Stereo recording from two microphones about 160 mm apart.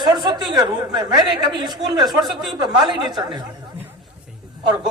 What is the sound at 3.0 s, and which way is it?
Speech, 25° right (ahead or behind).